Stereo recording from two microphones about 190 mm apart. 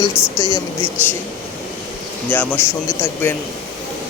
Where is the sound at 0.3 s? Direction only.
15° left (ahead or behind).